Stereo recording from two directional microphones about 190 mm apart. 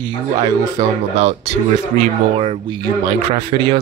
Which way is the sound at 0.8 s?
20° right (ahead or behind).